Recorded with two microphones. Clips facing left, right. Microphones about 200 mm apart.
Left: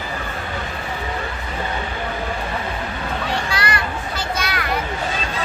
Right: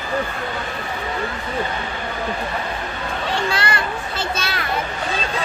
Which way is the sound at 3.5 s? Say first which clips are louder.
Right 1 dB; 25° right (ahead or behind).